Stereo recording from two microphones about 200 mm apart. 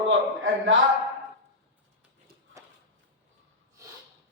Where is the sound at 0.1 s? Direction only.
70° right (ahead or behind).